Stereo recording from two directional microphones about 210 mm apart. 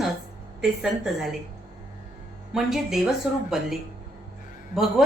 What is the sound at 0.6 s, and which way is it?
Speech, centre (ahead or behind).